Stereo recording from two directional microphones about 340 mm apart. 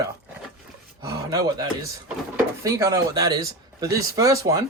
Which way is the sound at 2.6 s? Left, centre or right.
Centre.